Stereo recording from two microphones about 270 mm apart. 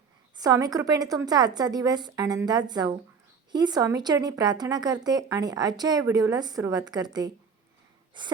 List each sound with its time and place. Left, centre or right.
0.3 s a woman's voice: centre